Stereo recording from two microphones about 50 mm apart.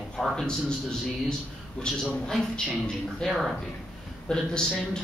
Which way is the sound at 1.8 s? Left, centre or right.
Centre.